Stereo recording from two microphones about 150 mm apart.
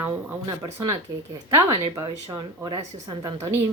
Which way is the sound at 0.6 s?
25° right (ahead or behind).